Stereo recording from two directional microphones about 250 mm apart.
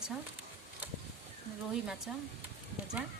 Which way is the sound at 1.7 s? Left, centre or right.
Centre.